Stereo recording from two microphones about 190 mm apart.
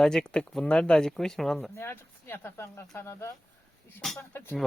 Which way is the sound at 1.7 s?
10° left (ahead or behind).